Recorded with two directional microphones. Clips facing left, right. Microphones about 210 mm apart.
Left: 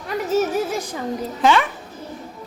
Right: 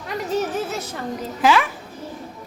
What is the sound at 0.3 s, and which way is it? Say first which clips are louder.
Speech: left 4 dB; 10° left (ahead or behind).